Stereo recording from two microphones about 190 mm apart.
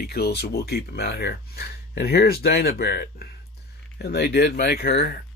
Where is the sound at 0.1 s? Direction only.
55° left (ahead or behind).